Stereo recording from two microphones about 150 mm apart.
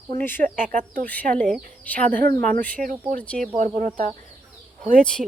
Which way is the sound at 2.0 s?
65° right (ahead or behind).